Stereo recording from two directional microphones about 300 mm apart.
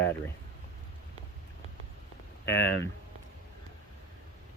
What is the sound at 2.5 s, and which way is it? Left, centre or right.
Speech, left.